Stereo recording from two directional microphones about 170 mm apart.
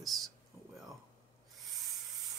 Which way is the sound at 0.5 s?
15° right (ahead or behind).